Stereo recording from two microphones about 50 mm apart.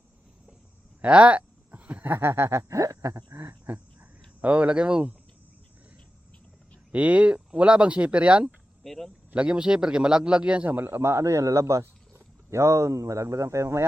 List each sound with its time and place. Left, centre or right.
1.0 s a sound: right
2.0 s speech: right
4.4 s speech: right
6.9 s speech: right
8.8 s speech: centre
9.3 s speech: centre
10.7 s speech: right
10.9 s speech: right